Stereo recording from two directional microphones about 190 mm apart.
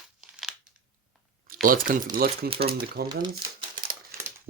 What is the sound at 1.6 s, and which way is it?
Speech, 45° right (ahead or behind).